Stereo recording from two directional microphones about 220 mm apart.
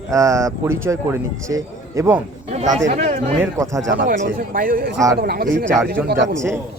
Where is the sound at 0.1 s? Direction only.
15° right (ahead or behind).